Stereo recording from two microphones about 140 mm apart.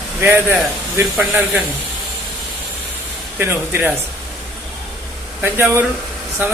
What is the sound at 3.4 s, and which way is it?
Speech, 15° right (ahead or behind).